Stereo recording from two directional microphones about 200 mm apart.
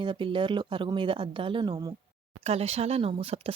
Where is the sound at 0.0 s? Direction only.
25° right (ahead or behind).